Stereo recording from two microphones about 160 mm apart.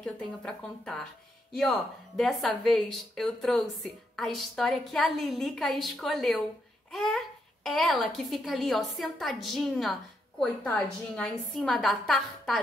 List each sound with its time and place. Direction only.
0.0 s a child's voice: 5° left (ahead or behind)